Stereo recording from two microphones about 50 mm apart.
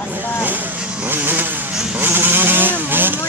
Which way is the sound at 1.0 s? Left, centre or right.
Right.